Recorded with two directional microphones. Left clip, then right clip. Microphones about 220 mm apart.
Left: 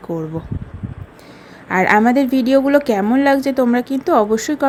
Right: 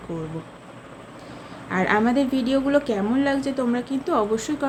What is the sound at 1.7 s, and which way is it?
A woman's voice, 35° left (ahead or behind).